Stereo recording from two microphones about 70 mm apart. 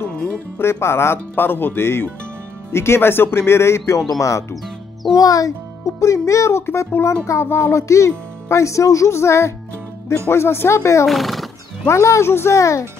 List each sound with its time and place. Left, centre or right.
0.6 s speech: left
4.2 s a child's voice: left
11.1 s speech: centre
11.9 s speech: left